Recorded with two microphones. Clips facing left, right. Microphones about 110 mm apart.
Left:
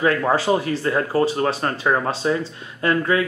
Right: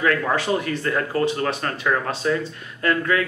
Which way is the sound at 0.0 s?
25° left (ahead or behind).